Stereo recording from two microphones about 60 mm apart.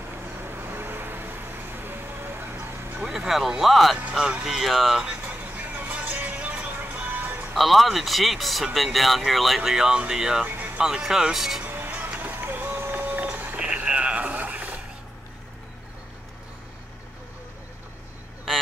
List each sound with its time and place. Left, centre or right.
0.1 s vehicle: right
3.0 s speech: centre
4.0 s speech: centre
4.6 s speech: centre
5.0 s music: right
7.5 s speech: centre
9.6 s speech: centre
11.6 s vehicle: right
11.9 s a sound: right
13.6 s radio: centre